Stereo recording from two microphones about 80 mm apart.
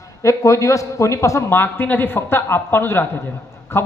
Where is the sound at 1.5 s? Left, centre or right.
Left.